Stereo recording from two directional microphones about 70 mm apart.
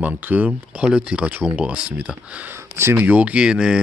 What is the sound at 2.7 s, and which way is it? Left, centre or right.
Speech, right.